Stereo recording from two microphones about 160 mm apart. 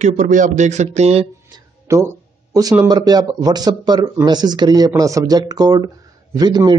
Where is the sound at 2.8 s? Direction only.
25° right (ahead or behind).